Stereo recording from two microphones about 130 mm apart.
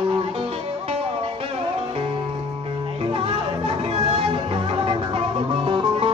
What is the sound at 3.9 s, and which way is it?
Music, 45° right (ahead or behind).